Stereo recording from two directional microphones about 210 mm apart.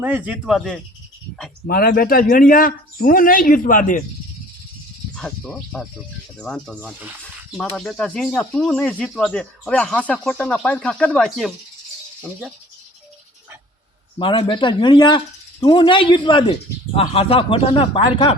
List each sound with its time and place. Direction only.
0.0 s speech: 5° right (ahead or behind)
1.6 s speech: 45° left (ahead or behind)
5.1 s speech: centre (ahead or behind)
14.2 s speech: 25° left (ahead or behind)